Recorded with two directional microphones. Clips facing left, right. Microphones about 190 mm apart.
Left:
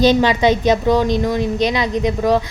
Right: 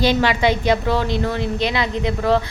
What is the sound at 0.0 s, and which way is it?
A woman's voice, 20° left (ahead or behind).